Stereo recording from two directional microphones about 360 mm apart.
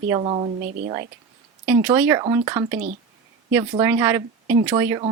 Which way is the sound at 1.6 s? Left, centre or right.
Centre.